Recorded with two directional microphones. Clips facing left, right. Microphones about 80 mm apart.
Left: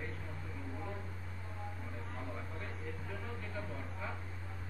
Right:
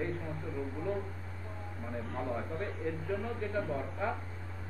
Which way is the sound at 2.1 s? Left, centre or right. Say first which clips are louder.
Right 10 dB; right.